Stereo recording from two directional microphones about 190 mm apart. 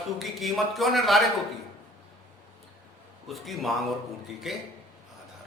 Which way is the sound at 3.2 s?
Centre (ahead or behind).